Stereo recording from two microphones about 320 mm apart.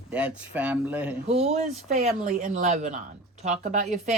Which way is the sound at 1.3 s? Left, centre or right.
Centre.